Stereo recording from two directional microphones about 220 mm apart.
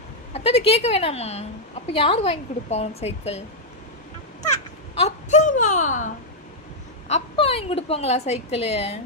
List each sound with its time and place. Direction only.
0.3 s a woman's voice: 25° left (ahead or behind)
4.5 s speech: 30° left (ahead or behind)
7.1 s a woman's voice: 25° left (ahead or behind)